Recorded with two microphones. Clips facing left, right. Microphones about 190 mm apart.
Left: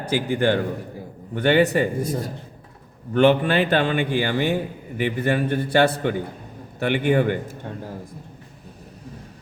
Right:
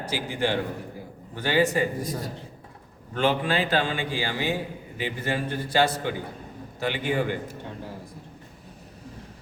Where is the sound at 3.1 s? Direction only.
65° left (ahead or behind).